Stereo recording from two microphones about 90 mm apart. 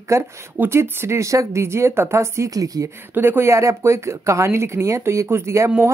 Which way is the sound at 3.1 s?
25° right (ahead or behind).